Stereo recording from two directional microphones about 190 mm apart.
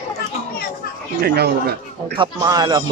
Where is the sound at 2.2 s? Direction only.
20° right (ahead or behind).